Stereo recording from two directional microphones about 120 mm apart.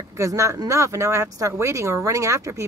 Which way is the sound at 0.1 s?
25° right (ahead or behind).